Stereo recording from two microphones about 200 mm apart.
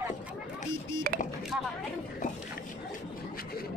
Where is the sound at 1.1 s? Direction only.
45° right (ahead or behind).